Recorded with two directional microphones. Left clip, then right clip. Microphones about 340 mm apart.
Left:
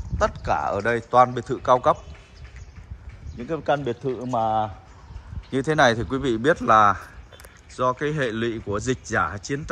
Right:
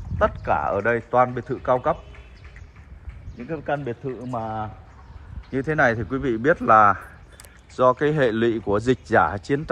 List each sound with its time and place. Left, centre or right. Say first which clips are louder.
0.2 s a man's voice: right 1 dB; centre
3.4 s a man's voice: left 3 dB; centre